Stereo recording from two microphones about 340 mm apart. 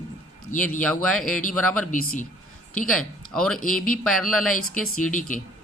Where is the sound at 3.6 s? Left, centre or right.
Left.